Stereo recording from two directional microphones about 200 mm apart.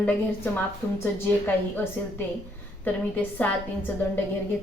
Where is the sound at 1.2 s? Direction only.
10° left (ahead or behind).